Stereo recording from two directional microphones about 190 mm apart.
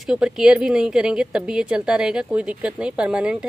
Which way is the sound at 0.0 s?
5° right (ahead or behind).